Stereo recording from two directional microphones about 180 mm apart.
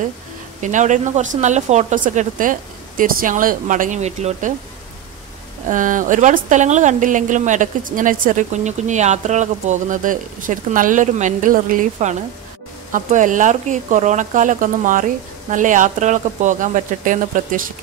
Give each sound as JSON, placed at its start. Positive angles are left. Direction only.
{"t": 0.6, "sound": "a woman's voice", "side_deg": -45}
{"t": 5.7, "sound": "a woman's voice", "side_deg": -45}